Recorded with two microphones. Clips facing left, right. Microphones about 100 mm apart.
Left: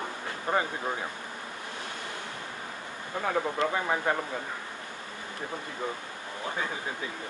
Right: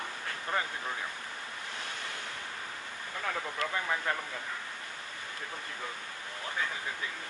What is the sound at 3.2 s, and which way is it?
Speech, 30° left (ahead or behind).